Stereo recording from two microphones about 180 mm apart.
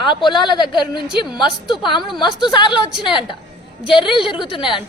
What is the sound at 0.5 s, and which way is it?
Speech, 25° left (ahead or behind).